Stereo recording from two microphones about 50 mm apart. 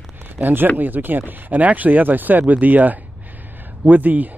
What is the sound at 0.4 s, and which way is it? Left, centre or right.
Speech, right.